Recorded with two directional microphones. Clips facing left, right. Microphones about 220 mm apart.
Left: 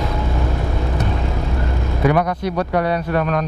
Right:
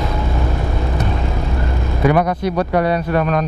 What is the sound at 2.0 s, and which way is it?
Speech, 10° right (ahead or behind).